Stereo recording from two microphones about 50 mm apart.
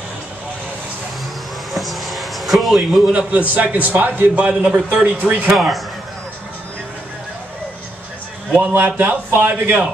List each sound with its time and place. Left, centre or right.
1.7 s a sound: centre
3.1 s a man's voice: right
4.4 s a man's voice: right
4.6 s a man's voice: centre
5.2 s a man's voice: right
5.5 s a man's voice: centre
8.5 s a man's voice: right